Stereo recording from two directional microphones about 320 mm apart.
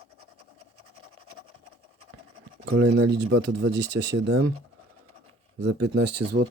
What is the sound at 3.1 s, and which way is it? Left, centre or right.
Speech, right.